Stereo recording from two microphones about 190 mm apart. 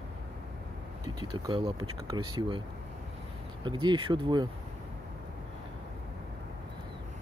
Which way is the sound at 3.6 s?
25° right (ahead or behind).